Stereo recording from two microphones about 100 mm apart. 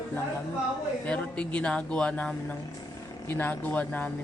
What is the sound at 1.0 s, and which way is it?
Speech, 15° left (ahead or behind).